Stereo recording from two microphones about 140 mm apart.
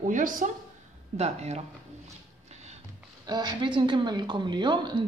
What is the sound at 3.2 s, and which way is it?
Speech, 30° right (ahead or behind).